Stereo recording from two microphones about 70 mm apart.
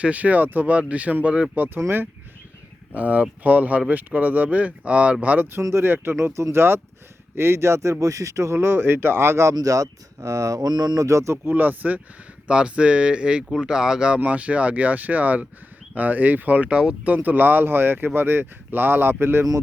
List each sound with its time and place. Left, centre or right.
0.0 s speech: right
2.9 s speech: right
5.8 s speech: right
9.6 s speech: right
11.0 s speech: right
11.4 s speech: right